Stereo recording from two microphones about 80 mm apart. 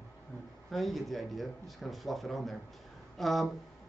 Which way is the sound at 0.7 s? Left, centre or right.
Centre.